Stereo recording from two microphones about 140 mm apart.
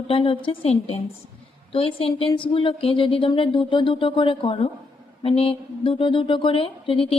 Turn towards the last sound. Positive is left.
turn(degrees=40)  # may be behind; listen again after turning